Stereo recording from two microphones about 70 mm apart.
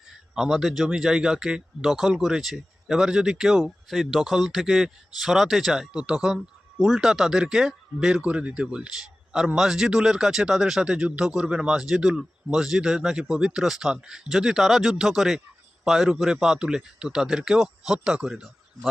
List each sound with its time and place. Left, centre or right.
0.3 s speech: centre
8.2 s speech: centre